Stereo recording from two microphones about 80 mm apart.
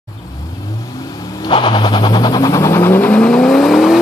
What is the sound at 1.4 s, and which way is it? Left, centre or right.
Vehicle, left.